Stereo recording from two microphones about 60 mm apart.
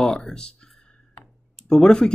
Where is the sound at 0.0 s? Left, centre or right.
Centre.